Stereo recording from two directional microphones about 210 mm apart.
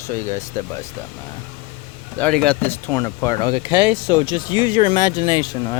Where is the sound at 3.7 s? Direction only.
20° left (ahead or behind).